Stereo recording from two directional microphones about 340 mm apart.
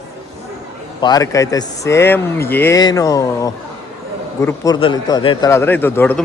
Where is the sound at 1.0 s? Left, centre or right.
Centre.